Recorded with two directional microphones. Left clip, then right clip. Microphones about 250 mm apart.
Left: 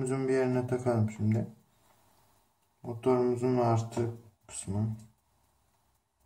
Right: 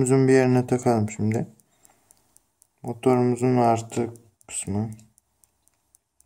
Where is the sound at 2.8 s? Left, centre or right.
Right.